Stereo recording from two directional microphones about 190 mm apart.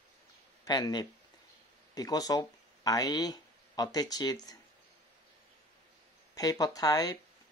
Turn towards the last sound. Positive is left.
turn(degrees=20)  # may be behind; listen again after turning